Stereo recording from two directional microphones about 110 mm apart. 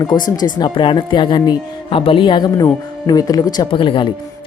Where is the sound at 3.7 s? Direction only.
50° left (ahead or behind).